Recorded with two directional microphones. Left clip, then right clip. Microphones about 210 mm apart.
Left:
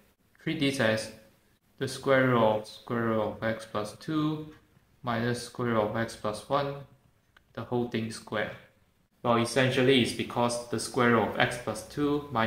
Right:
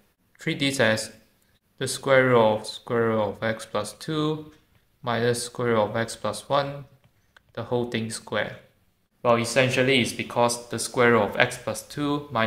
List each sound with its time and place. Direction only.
0.4 s speech: 40° right (ahead or behind)